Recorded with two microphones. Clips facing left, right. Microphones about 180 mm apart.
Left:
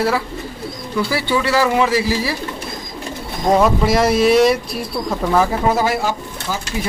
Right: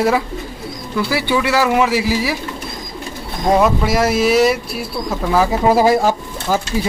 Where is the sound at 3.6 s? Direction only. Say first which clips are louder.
Left 2 dB; 5° right (ahead or behind).